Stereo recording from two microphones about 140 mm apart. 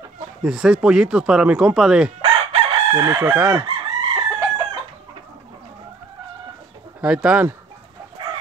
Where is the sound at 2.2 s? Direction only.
45° right (ahead or behind).